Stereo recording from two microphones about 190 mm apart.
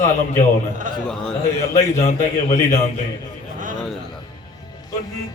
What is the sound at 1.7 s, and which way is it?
A man's voice, 40° left (ahead or behind).